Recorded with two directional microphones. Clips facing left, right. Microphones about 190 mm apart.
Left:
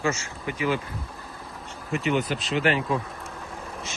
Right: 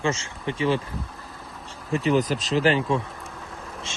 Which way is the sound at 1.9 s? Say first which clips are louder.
Right 3 dB; 35° right (ahead or behind).